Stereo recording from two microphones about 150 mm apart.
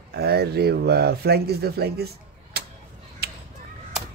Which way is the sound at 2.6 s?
90° right.